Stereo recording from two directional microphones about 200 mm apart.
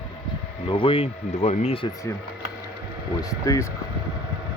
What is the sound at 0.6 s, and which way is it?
Speech, 25° left (ahead or behind).